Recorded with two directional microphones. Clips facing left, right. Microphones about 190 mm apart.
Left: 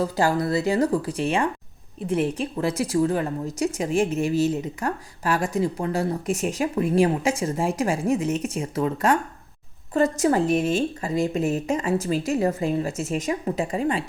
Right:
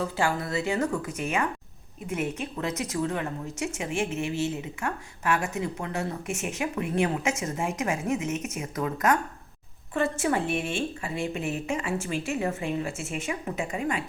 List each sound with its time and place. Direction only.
0.0 s a woman's voice: 35° left (ahead or behind)